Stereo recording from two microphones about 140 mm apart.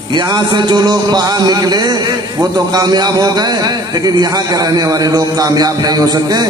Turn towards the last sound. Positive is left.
turn(degrees=-25)  # may be behind; listen again after turning